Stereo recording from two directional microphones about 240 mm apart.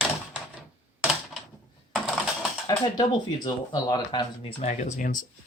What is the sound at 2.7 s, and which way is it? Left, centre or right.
Speech, centre.